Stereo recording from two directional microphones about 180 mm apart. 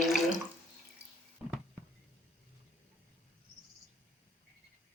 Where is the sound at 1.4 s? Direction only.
5° right (ahead or behind).